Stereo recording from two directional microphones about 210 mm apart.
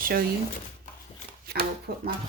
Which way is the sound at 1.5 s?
50° right (ahead or behind).